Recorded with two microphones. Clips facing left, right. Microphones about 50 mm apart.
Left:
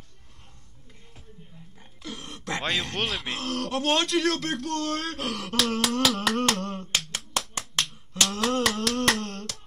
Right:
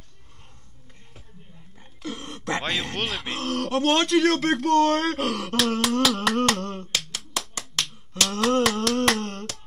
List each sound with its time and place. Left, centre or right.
1.8 s speech: centre
4.4 s speech: right
5.2 s humming: centre
8.3 s a sound: centre